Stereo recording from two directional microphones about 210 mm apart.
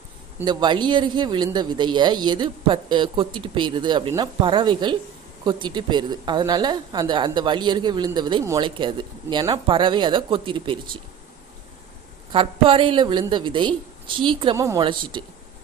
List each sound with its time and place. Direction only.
0.4 s a woman's voice: 20° right (ahead or behind)
12.3 s a woman's voice: 25° right (ahead or behind)